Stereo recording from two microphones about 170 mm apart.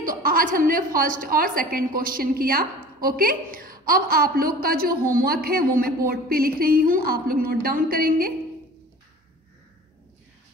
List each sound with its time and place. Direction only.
0.0 s a woman's voice: 55° right (ahead or behind)